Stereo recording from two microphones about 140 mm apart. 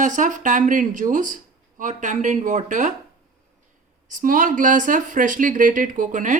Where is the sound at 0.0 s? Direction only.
65° right (ahead or behind).